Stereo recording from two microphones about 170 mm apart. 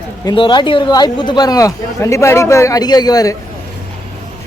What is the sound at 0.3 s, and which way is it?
Speech, 25° left (ahead or behind).